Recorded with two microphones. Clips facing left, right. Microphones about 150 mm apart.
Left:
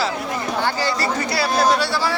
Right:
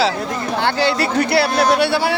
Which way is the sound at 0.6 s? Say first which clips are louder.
Right 6 dB; 70° right (ahead or behind).